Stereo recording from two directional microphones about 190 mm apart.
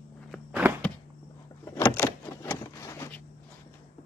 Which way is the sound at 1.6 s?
10° left (ahead or behind).